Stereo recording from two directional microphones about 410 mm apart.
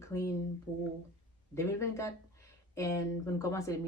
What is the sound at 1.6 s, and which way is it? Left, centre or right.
Speech, centre.